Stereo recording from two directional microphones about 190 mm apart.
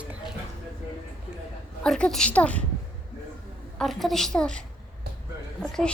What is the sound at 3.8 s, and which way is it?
A woman's voice, centre (ahead or behind).